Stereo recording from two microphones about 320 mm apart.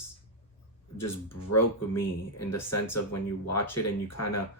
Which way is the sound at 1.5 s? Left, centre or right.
Left.